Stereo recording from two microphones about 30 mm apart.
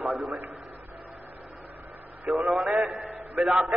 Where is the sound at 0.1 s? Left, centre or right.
Centre.